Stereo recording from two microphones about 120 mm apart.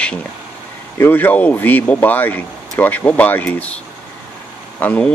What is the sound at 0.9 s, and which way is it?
Speech, 20° left (ahead or behind).